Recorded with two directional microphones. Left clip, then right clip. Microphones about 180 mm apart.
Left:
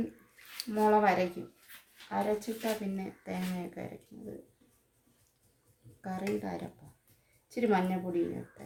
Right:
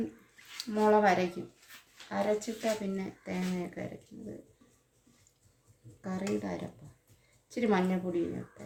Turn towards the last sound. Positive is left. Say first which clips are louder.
# even
turn(degrees=5)  # may be behind; listen again after turning